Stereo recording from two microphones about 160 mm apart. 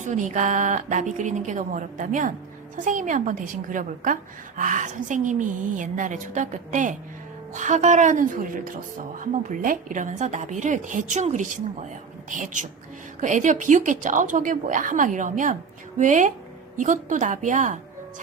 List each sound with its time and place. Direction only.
0.0 s a woman's voice: 50° right (ahead or behind)